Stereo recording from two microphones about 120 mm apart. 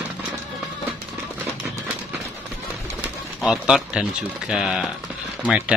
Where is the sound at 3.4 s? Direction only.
Centre (ahead or behind).